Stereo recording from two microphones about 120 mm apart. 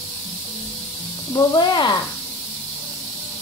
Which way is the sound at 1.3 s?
35° left (ahead or behind).